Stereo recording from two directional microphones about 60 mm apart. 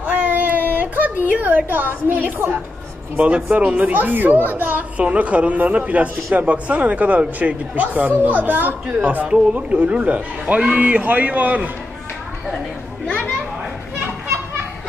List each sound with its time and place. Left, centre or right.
0.0 s a sound: right
1.7 s a woman's voice: right
3.2 s a woman's voice: right
13.0 s a child's voice: centre